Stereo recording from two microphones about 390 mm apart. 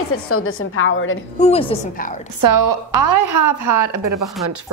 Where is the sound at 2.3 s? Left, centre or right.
Right.